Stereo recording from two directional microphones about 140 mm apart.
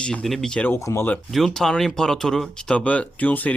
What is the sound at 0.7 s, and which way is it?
Speech, 20° left (ahead or behind).